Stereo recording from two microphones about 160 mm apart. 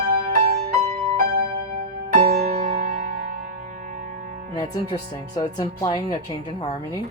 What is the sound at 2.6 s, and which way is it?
Music, 65° right (ahead or behind).